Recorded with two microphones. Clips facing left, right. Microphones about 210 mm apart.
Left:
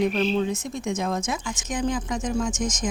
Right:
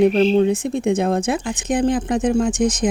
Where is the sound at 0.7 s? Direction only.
60° right (ahead or behind).